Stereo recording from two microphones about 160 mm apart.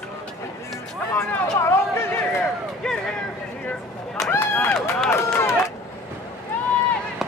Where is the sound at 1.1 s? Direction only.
15° left (ahead or behind).